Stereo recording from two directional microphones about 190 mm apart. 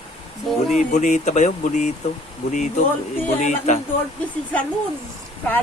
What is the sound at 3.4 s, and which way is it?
Speech, 40° left (ahead or behind).